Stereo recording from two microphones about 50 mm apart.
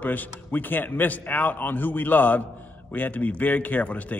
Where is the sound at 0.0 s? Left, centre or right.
Left.